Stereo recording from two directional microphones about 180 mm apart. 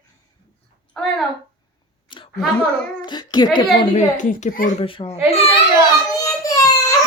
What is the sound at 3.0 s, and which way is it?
Speech, 25° left (ahead or behind).